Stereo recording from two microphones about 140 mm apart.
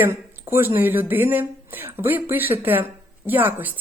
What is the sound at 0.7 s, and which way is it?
Speech, 15° right (ahead or behind).